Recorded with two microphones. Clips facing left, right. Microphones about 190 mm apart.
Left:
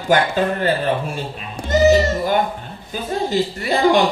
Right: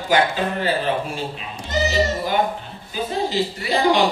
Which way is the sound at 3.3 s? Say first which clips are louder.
Left 3 dB; 50° left (ahead or behind).